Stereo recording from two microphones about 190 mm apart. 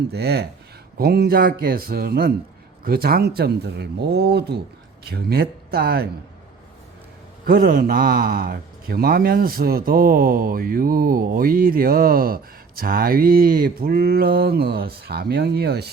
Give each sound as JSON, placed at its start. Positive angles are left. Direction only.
{"t": 0.1, "sound": "a man's voice", "side_deg": -60}
{"t": 7.4, "sound": "a man's voice", "side_deg": -50}